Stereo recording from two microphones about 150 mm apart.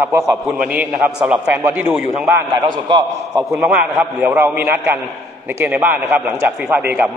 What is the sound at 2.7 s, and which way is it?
Speech, 30° right (ahead or behind).